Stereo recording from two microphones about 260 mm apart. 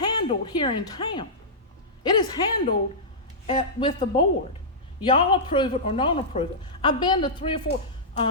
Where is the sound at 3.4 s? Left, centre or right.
Centre.